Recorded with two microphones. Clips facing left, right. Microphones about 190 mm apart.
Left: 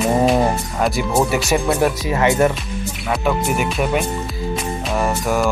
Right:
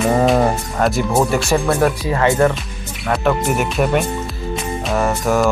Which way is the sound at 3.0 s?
5° left (ahead or behind).